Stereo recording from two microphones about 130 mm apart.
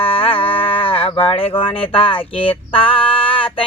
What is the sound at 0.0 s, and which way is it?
Livestock, 45° left (ahead or behind).